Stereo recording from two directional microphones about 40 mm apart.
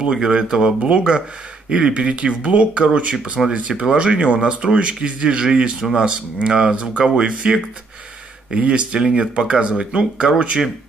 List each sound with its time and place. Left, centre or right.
0.0 s speech: centre
8.5 s speech: right